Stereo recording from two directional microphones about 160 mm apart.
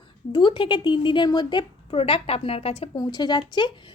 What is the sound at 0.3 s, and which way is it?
Speech, 30° left (ahead or behind).